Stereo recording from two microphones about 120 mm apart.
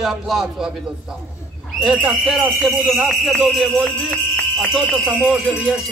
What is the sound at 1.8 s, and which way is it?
Speech, centre (ahead or behind).